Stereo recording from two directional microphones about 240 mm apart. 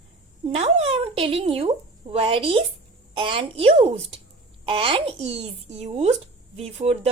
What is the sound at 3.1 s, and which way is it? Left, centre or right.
A child's voice, right.